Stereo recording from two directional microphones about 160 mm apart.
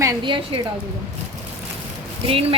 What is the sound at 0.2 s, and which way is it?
Speech, 30° right (ahead or behind).